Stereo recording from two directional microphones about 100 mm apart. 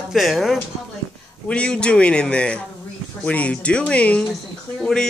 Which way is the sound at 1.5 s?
10° left (ahead or behind).